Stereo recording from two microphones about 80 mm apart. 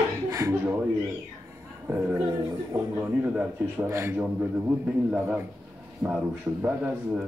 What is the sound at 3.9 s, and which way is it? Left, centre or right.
Speech, right.